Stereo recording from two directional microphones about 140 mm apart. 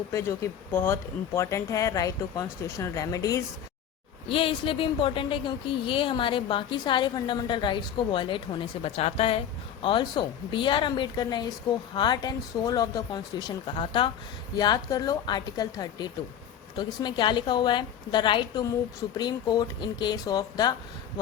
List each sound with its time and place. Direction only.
0.1 s speech: 20° left (ahead or behind)
4.3 s speech: 40° left (ahead or behind)